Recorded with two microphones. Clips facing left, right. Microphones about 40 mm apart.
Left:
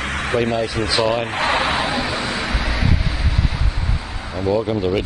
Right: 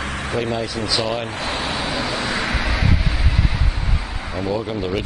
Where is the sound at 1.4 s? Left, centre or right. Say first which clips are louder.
Left 6 dB; left.